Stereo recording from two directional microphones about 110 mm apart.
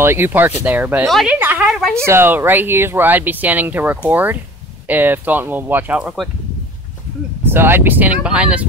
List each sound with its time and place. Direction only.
0.0 s a woman's voice: 20° right (ahead or behind)
1.7 s speech: 5° left (ahead or behind)
2.0 s speech: 20° right (ahead or behind)
7.4 s speech: 20° right (ahead or behind)